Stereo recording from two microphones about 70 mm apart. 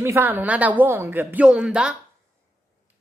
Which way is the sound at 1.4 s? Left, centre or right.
Centre.